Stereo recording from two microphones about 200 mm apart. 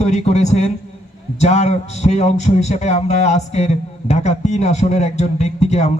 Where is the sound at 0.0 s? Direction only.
35° left (ahead or behind).